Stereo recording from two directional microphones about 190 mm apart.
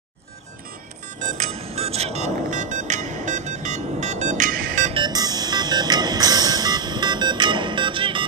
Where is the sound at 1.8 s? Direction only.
35° right (ahead or behind).